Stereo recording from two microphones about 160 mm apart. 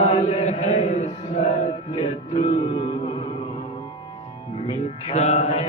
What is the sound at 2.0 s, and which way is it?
Music, 45° left (ahead or behind).